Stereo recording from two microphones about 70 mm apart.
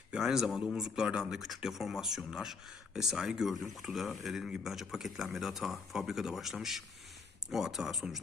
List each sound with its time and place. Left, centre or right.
0.1 s speech: centre